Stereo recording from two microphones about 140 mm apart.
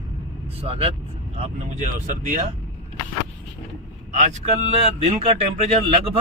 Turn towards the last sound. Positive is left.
turn(degrees=-45)  # may be behind; listen again after turning